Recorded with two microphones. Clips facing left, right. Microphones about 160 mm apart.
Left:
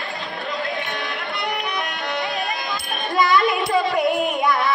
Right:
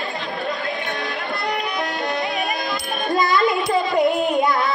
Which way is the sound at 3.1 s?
20° right (ahead or behind).